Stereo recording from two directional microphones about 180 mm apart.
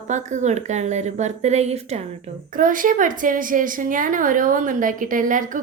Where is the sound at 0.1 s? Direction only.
40° right (ahead or behind).